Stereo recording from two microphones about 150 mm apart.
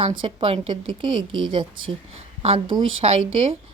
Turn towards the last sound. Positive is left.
turn(degrees=-40)  # may be behind; listen again after turning